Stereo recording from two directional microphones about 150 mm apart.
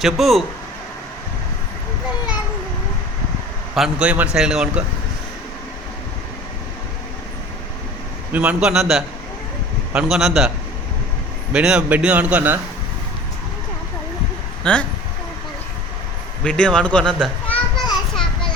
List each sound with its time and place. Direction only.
0.0 s a man's voice: centre (ahead or behind)
3.8 s a man's voice: 5° right (ahead or behind)
8.3 s a man's voice: 10° right (ahead or behind)
11.5 s a man's voice: 5° right (ahead or behind)
14.6 s speech: 5° left (ahead or behind)
16.4 s speech: 5° left (ahead or behind)